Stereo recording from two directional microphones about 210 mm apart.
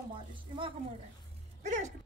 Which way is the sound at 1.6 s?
35° right (ahead or behind).